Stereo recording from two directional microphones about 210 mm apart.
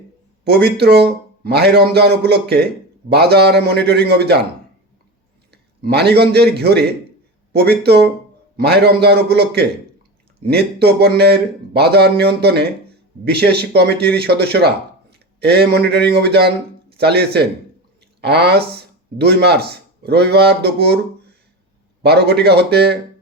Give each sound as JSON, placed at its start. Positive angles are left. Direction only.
{"t": 0.4, "sound": "speech", "side_deg": -50}
{"t": 5.5, "sound": "a man's voice", "side_deg": -50}
{"t": 22.0, "sound": "speech", "side_deg": -50}